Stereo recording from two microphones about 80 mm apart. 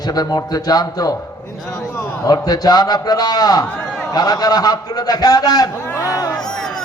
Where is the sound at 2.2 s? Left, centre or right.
Left.